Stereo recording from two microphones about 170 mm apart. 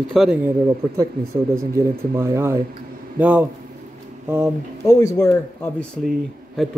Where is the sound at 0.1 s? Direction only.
Centre (ahead or behind).